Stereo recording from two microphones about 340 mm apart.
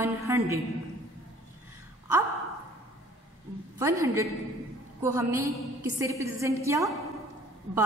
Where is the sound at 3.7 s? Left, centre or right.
Centre.